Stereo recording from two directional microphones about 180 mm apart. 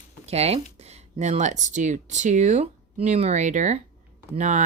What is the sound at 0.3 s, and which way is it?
Speech, 35° right (ahead or behind).